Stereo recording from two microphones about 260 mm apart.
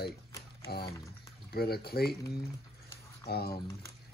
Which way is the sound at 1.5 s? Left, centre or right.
Left.